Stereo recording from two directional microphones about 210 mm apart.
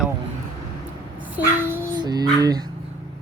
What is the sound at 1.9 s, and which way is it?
Speech, 20° right (ahead or behind).